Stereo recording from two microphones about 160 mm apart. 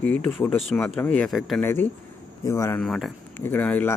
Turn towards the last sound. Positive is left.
turn(degrees=10)  # may be behind; listen again after turning